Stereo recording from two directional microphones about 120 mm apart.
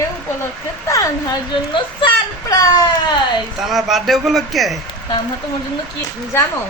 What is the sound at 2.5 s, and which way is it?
Speech, 30° left (ahead or behind).